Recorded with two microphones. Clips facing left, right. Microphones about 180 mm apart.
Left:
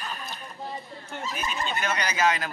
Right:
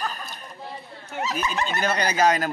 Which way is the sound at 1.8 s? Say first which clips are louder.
Right 5 dB; 35° right (ahead or behind).